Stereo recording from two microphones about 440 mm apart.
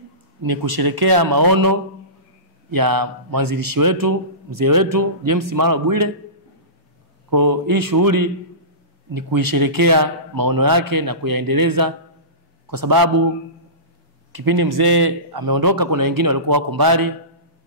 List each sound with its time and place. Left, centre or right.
0.4 s a man's voice: right
7.2 s a man's voice: right
14.3 s a man's voice: right